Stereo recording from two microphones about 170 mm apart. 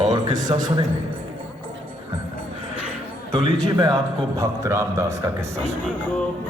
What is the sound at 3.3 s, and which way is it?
A man's voice, 20° right (ahead or behind).